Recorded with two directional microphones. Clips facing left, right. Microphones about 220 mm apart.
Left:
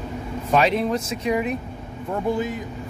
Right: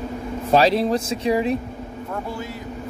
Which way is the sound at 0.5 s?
35° right (ahead or behind).